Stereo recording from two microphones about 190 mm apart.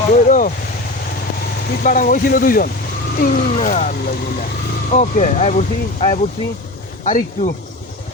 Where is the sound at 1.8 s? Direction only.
45° left (ahead or behind).